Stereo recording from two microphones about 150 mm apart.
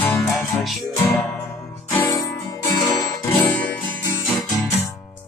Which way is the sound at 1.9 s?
20° left (ahead or behind).